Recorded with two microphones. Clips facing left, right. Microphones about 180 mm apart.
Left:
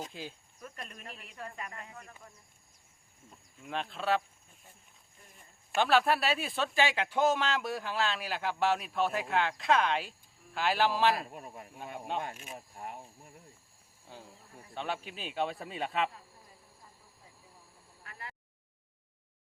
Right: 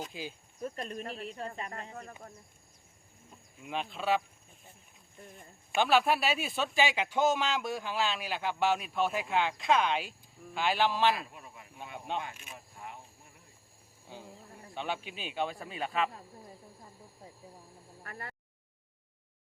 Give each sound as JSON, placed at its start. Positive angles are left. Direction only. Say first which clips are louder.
{"t": 0.1, "sound": "a man's voice", "louder": "right 2 dB", "side_deg": -5}
{"t": 0.6, "sound": "speech", "louder": "right 9 dB", "side_deg": -35}
{"t": 3.7, "sound": "a man's voice", "louder": "right 1 dB", "side_deg": 0}
{"t": 5.7, "sound": "a man's voice", "louder": "even", "side_deg": 0}
{"t": 11.1, "sound": "speech", "louder": "left 1 dB", "side_deg": 45}
{"t": 11.9, "sound": "a man's voice", "louder": "even", "side_deg": 5}
{"t": 12.2, "sound": "speech", "louder": "left 3 dB", "side_deg": 45}
{"t": 14.1, "sound": "a man's voice", "louder": "right 3 dB", "side_deg": 0}
{"t": 18.0, "sound": "a sound", "louder": "right 3 dB", "side_deg": -50}